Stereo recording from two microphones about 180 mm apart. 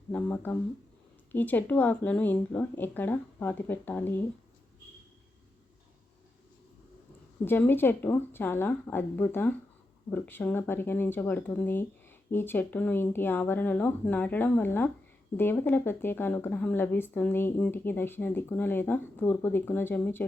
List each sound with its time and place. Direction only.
0.1 s speech: 10° left (ahead or behind)
7.4 s speech: 10° left (ahead or behind)